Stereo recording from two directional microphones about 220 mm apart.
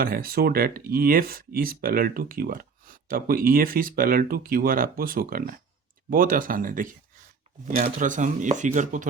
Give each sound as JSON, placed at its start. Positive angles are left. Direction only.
{"t": 0.0, "sound": "speech", "side_deg": -40}